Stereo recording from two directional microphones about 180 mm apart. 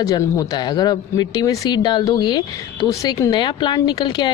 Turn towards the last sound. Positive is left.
turn(degrees=25)  # may be behind; listen again after turning